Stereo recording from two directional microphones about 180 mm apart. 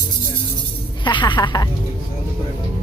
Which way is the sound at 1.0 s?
25° left (ahead or behind).